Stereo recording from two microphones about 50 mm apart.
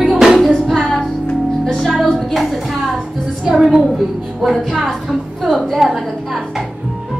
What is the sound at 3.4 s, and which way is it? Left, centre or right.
Speech, centre.